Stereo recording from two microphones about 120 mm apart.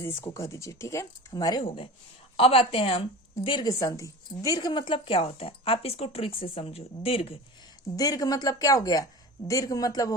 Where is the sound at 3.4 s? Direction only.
40° left (ahead or behind).